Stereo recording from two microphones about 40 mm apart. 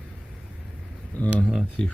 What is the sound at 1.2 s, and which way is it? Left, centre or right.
Speech, left.